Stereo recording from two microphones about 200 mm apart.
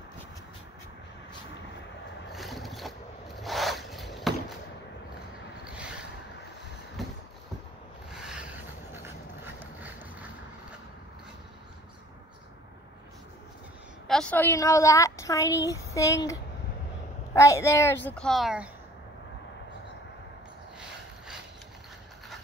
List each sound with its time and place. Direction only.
2.3 s vehicle: centre (ahead or behind)
3.3 s zipper: centre (ahead or behind)
8.1 s a sound: 5° right (ahead or behind)
14.0 s a woman's voice: 5° left (ahead or behind)